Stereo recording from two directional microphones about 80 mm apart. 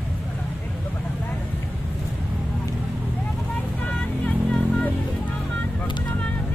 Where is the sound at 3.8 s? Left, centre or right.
Centre.